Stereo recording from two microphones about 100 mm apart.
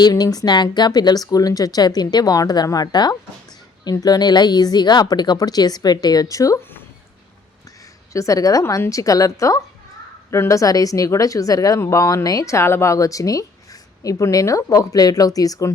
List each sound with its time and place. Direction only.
0.0 s a woman's voice: 40° left (ahead or behind)
8.1 s a woman's voice: 35° left (ahead or behind)